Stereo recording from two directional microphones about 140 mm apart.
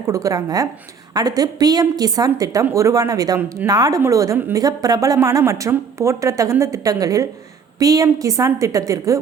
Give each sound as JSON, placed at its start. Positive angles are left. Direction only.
{"t": 0.1, "sound": "a woman's voice", "side_deg": -25}